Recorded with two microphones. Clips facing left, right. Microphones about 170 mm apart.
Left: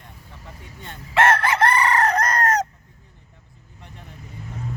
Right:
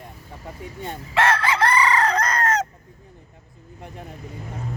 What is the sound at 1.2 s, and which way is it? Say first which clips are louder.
Chicken: left 2 dB; 50° left (ahead or behind).